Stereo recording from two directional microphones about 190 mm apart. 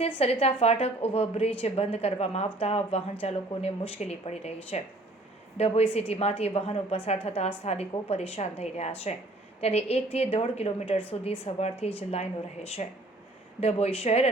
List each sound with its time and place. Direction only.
0.2 s speech: 30° left (ahead or behind)